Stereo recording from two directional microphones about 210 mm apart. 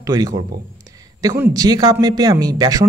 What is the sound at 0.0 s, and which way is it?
A woman's voice, 15° right (ahead or behind).